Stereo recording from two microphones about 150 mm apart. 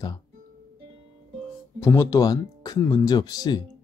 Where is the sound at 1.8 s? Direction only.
20° left (ahead or behind).